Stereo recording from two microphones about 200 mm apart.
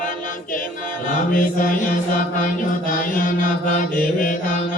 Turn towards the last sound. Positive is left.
turn(degrees=45)  # may be behind; listen again after turning